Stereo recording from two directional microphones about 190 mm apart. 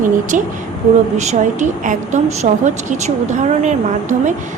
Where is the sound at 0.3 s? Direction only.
40° right (ahead or behind).